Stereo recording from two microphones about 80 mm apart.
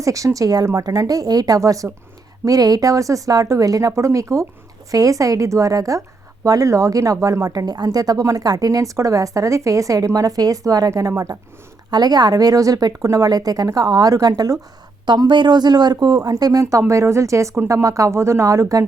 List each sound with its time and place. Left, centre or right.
0.0 s speech: right
15.0 s speech: right